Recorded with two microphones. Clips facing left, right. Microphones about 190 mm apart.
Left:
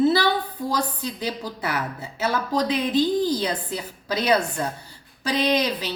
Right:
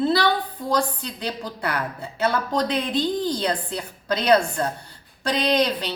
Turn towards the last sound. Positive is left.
turn(degrees=5)  # may be behind; listen again after turning